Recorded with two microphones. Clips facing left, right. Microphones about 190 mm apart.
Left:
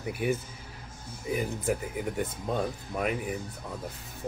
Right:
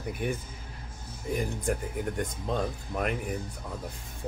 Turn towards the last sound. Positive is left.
turn(degrees=5)  # may be behind; listen again after turning